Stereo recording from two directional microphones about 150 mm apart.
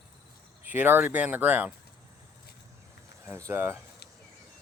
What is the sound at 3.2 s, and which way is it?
Speech, 20° right (ahead or behind).